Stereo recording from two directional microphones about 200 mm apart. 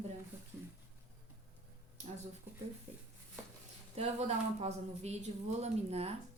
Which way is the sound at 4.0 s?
30° right (ahead or behind).